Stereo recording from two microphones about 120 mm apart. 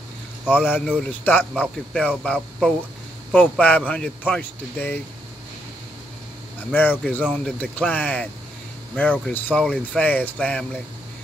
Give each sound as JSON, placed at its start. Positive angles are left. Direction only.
{"t": 0.5, "sound": "speech", "side_deg": 15}
{"t": 6.7, "sound": "speech", "side_deg": 15}